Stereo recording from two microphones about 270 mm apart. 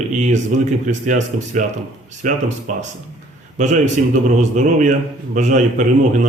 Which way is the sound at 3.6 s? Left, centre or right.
Right.